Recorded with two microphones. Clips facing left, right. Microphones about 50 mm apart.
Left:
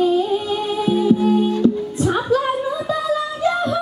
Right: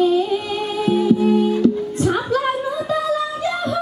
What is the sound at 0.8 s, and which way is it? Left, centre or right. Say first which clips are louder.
Music: right 1 dB; right.